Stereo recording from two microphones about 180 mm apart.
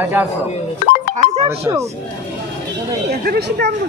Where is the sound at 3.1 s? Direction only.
65° right (ahead or behind).